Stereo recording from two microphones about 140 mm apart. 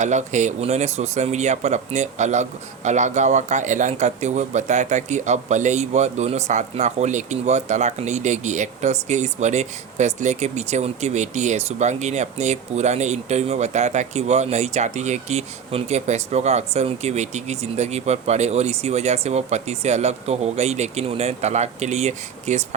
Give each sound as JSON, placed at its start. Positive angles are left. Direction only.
{"t": 0.0, "sound": "speech", "side_deg": -60}